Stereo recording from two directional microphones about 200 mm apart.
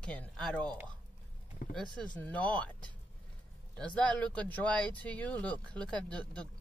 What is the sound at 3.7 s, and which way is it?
Speech, 5° left (ahead or behind).